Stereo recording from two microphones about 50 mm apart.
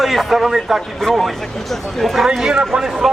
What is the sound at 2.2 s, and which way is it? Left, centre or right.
Speech, centre.